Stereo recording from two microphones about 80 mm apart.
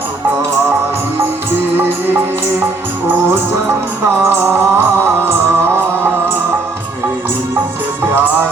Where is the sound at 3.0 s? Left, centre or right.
Right.